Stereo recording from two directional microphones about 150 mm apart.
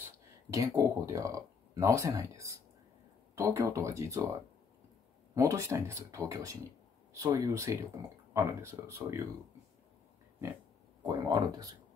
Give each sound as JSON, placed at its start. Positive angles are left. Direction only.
{"t": 0.5, "sound": "speech", "side_deg": -20}
{"t": 5.3, "sound": "speech", "side_deg": -20}
{"t": 11.1, "sound": "speech", "side_deg": -25}